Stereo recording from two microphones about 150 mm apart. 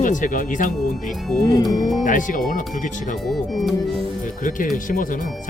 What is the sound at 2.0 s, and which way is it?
Speech, 60° left (ahead or behind).